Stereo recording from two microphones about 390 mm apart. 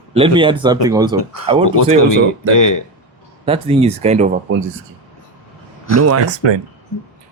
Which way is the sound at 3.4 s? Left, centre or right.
Centre.